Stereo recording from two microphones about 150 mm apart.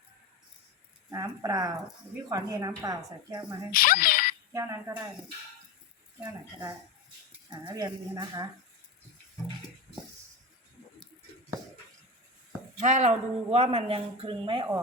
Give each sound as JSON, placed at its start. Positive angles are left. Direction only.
{"t": 1.1, "sound": "a woman's voice", "side_deg": -25}
{"t": 3.7, "sound": "speech", "side_deg": 75}
{"t": 4.5, "sound": "a woman's voice", "side_deg": -20}
{"t": 7.7, "sound": "a woman's voice", "side_deg": -30}
{"t": 12.8, "sound": "speech", "side_deg": -50}